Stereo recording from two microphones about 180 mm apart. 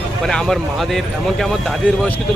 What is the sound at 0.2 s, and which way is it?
Speech, 5° left (ahead or behind).